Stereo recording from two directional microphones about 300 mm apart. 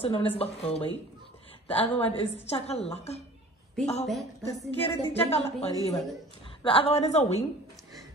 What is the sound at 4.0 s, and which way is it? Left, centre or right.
Speech, centre.